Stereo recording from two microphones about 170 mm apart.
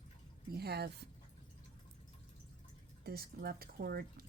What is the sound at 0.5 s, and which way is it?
Speech, 70° right (ahead or behind).